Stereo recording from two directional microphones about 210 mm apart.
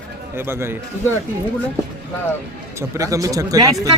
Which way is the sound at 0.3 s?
10° right (ahead or behind).